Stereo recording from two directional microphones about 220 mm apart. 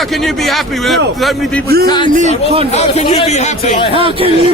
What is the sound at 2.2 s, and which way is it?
Speech, 30° right (ahead or behind).